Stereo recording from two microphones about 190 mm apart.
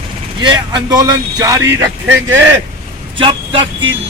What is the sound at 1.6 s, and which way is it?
Speech, 75° right (ahead or behind).